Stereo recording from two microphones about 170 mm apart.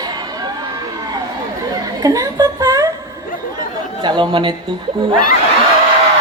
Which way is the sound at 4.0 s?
25° right (ahead or behind).